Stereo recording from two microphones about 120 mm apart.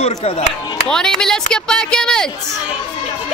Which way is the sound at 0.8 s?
5° left (ahead or behind).